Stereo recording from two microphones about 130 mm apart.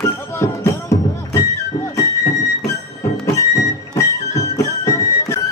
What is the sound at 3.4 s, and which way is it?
Music, 25° left (ahead or behind).